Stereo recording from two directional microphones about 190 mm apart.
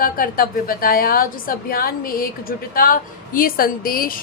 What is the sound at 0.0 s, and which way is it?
A woman's voice, 50° left (ahead or behind).